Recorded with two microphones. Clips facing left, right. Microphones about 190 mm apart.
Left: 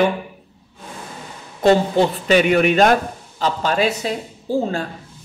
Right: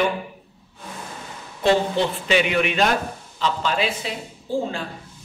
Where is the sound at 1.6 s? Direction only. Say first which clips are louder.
Left 5 dB; 45° left (ahead or behind).